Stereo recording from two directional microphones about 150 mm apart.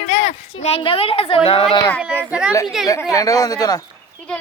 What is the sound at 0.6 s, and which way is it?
Speech, 40° left (ahead or behind).